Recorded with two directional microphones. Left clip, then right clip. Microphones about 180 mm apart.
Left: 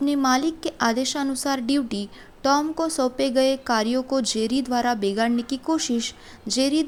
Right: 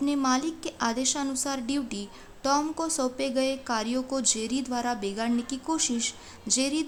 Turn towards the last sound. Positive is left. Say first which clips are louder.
# left 5 dB
turn(degrees=25)  # may be behind; listen again after turning